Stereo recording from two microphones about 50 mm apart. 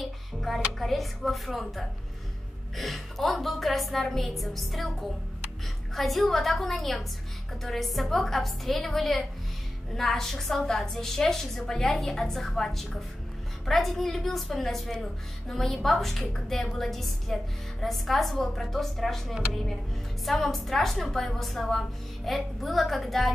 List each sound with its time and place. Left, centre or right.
0.0 s a woman's voice: centre
5.9 s a woman's voice: centre